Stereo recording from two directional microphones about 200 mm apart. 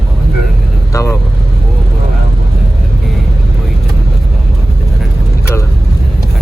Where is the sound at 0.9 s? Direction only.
15° left (ahead or behind).